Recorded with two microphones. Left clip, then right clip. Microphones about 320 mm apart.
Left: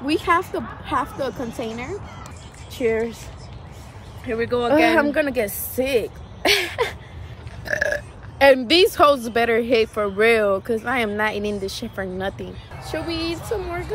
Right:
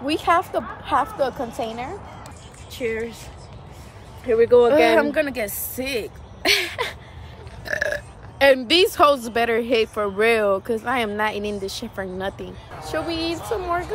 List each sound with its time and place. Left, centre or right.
0.0 s speech: centre
2.7 s speech: centre
4.2 s speech: right
4.6 s speech: centre